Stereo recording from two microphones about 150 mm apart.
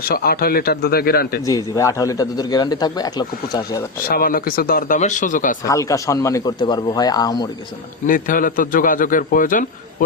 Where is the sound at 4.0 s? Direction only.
75° left (ahead or behind); by 5.5 s 60° left (ahead or behind).